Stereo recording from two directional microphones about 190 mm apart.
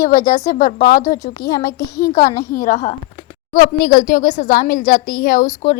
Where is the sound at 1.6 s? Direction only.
15° left (ahead or behind).